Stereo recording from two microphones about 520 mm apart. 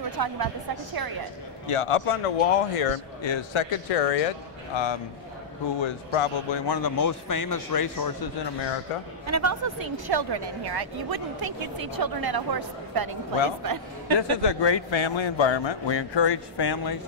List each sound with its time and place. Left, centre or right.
0.1 s a woman's voice: right
1.7 s speech: left
3.2 s speech: left
5.8 s a man's voice: left
6.7 s a man's voice: left
9.2 s speech: right
14.4 s a man's voice: left